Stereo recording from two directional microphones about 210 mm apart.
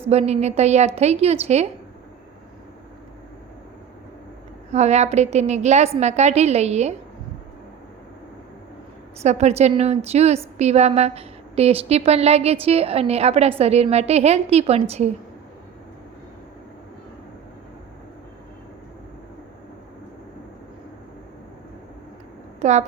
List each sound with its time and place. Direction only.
0.1 s a woman's voice: 30° right (ahead or behind)
4.7 s a woman's voice: 30° right (ahead or behind)
9.2 s a woman's voice: 30° right (ahead or behind)
22.6 s a woman's voice: 35° right (ahead or behind)